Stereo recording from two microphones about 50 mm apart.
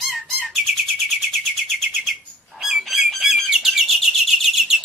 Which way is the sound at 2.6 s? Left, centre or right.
Centre.